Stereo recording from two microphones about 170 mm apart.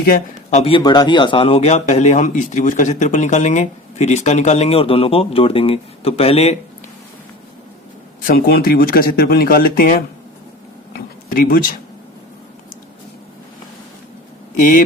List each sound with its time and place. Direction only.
0.5 s speech: 35° left (ahead or behind)
0.8 s speech: 25° left (ahead or behind)
8.3 s speech: 60° left (ahead or behind)
10.9 s a sound: 55° left (ahead or behind)
14.5 s speech: 45° left (ahead or behind)